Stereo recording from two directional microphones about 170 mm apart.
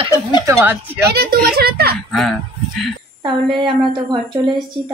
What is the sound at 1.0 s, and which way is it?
Speech, 65° right (ahead or behind).